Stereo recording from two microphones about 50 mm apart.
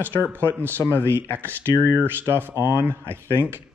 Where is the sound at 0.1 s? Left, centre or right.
Left.